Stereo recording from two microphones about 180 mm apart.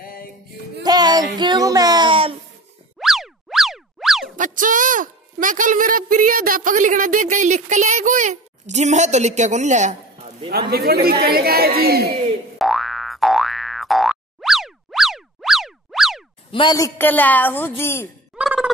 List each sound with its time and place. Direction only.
0.0 s a sound: 55° left (ahead or behind)
0.8 s a sound: 20° right (ahead or behind)
3.0 s boing: centre (ahead or behind)
4.4 s a woman's voice: 45° right (ahead or behind)
10.7 s speech: 60° right (ahead or behind)
12.5 s boing: centre (ahead or behind)
16.5 s a woman's voice: 20° left (ahead or behind)
18.3 s gobble: 5° right (ahead or behind)